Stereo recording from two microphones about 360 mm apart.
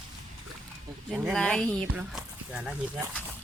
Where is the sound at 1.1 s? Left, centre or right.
Centre.